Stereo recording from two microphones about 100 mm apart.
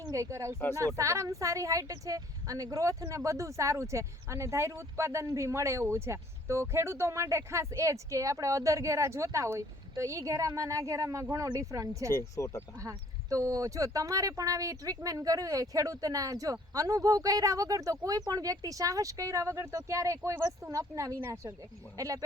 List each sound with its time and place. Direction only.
0.0 s a woman's voice: 30° right (ahead or behind)
12.0 s speech: 30° left (ahead or behind)
13.3 s a woman's voice: 35° right (ahead or behind)